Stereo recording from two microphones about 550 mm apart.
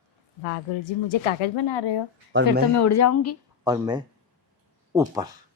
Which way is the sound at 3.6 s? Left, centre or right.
Centre.